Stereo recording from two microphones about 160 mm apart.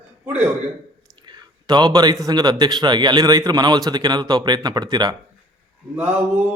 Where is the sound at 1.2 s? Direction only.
25° right (ahead or behind).